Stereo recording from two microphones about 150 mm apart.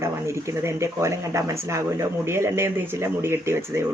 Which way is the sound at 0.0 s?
20° right (ahead or behind).